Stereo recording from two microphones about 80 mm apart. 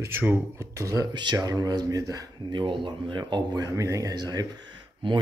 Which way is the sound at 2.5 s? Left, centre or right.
Right.